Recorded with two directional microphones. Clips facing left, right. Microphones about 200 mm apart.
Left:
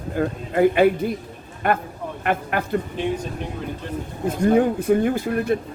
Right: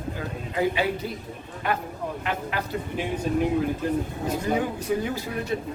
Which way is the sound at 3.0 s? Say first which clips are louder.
Left 4 dB; 5° right (ahead or behind).